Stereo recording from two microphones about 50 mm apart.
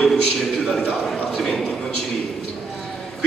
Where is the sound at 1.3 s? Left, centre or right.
Centre.